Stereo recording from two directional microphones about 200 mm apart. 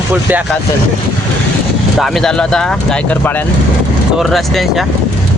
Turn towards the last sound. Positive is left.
turn(degrees=0)  # may be behind; listen again after turning